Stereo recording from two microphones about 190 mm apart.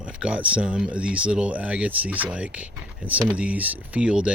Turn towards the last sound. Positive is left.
turn(degrees=-5)  # may be behind; listen again after turning